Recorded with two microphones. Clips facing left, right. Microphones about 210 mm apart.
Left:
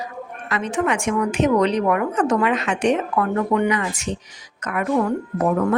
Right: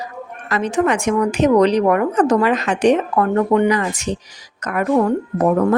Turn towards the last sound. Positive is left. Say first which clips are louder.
# right 4 dB
turn(degrees=-40)  # may be behind; listen again after turning